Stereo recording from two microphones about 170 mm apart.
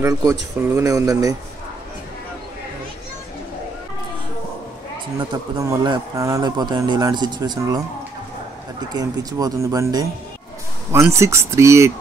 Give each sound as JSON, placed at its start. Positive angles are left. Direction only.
{"t": 0.0, "sound": "speech", "side_deg": -15}
{"t": 5.3, "sound": "speech", "side_deg": -20}
{"t": 8.9, "sound": "speech", "side_deg": -20}